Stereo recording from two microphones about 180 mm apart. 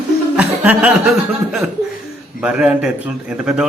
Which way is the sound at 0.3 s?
5° right (ahead or behind).